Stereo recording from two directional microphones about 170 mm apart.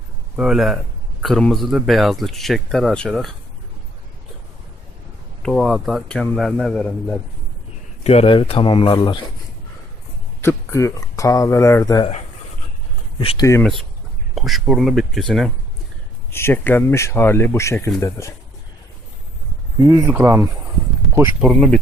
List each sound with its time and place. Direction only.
0.3 s speech: 5° right (ahead or behind)
5.4 s speech: centre (ahead or behind)
8.0 s speech: 35° left (ahead or behind)
10.4 s speech: 15° left (ahead or behind)
13.1 s speech: 25° left (ahead or behind)
13.6 s speech: centre (ahead or behind)
16.3 s speech: 15° left (ahead or behind)
19.8 s speech: 20° right (ahead or behind)
21.4 s speech: 5° left (ahead or behind)